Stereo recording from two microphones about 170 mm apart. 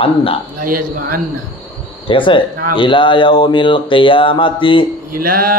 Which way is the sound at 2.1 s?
30° left (ahead or behind).